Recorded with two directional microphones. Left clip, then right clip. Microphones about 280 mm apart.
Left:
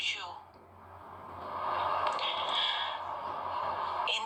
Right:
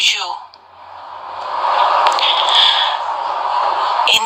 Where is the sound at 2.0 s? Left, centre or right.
Right.